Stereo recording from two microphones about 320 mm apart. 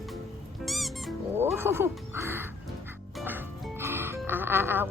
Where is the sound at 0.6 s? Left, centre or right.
Centre.